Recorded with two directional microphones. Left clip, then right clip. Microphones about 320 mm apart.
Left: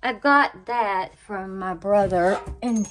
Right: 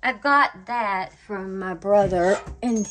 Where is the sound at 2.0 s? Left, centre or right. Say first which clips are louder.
Even; left.